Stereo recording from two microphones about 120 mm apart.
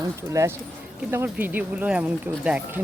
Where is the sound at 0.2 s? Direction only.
25° right (ahead or behind).